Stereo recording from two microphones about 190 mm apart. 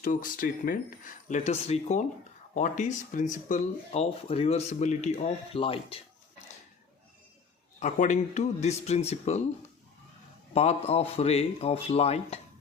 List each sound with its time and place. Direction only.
0.0 s speech: 45° left (ahead or behind); by 6.0 s 30° left (ahead or behind)
7.8 s speech: 40° left (ahead or behind)
10.5 s speech: 35° left (ahead or behind)